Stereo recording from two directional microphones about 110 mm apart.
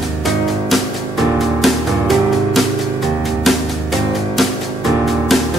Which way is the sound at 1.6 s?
Centre (ahead or behind).